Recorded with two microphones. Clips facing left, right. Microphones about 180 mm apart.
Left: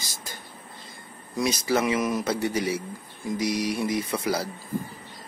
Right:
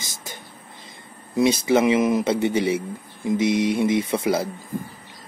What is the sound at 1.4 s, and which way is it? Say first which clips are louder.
Speech: right 6 dB; 25° right (ahead or behind).